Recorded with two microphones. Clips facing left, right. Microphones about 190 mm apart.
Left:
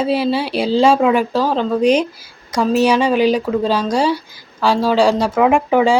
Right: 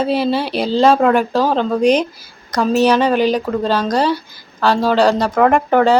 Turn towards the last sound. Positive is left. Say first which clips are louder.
# right 1 dB
turn(degrees=5)  # may be behind; listen again after turning